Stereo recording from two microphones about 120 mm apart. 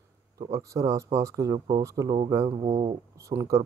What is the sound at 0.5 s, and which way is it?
Speech, 25° right (ahead or behind).